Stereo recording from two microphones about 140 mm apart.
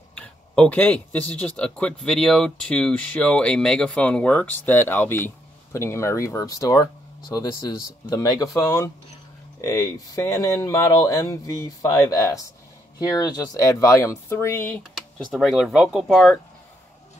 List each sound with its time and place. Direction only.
0.1 s speech: 10° left (ahead or behind)
15.3 s speech: centre (ahead or behind)